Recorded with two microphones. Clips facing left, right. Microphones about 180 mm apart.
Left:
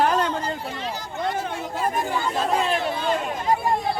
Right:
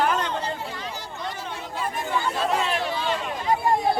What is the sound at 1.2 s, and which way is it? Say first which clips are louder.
Chatter: left 8 dB; 55° left (ahead or behind).